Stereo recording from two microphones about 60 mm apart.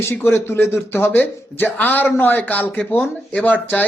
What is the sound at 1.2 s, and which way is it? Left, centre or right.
Speech, left.